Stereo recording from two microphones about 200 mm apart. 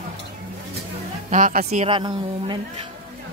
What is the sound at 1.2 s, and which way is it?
Speech, 40° right (ahead or behind).